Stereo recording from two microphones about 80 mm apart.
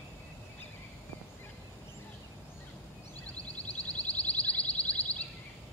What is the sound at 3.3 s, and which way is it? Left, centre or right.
Music, centre.